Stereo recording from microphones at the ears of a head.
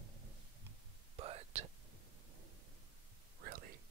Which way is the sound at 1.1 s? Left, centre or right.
Right.